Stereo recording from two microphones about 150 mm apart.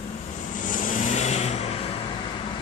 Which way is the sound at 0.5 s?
60° left (ahead or behind).